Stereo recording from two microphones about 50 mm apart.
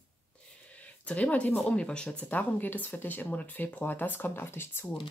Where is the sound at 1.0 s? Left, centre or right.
Left.